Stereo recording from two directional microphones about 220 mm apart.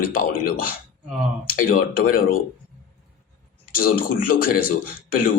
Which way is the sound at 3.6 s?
40° left (ahead or behind).